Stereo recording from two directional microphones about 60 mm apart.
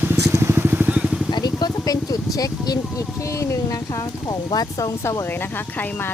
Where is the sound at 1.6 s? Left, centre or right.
Left.